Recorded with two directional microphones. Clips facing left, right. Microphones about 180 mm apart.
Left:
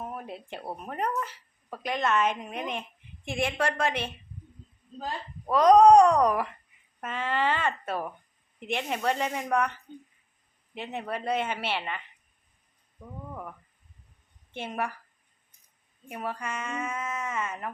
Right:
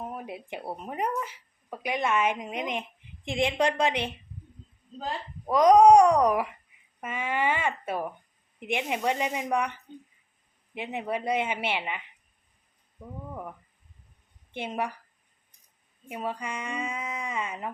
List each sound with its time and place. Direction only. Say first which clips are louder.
0.0 s speech: right 1 dB; 15° right (ahead or behind)
5.5 s speech: even; 10° right (ahead or behind)
10.8 s speech: right 2 dB; 15° right (ahead or behind)
14.5 s speech: right 1 dB; 15° right (ahead or behind)
16.0 s speech: right 1 dB; 15° right (ahead or behind)